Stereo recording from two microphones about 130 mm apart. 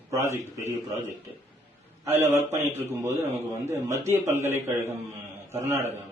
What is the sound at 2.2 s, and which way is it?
Speech, 20° right (ahead or behind).